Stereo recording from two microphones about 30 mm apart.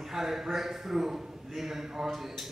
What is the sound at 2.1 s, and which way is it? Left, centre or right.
Speech, centre.